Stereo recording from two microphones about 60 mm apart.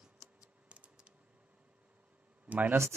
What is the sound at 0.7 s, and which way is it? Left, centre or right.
Typing, centre.